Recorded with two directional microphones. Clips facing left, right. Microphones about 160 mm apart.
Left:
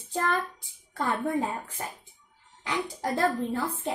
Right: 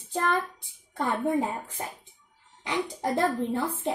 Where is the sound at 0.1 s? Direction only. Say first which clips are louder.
Right 1 dB; 20° right (ahead or behind).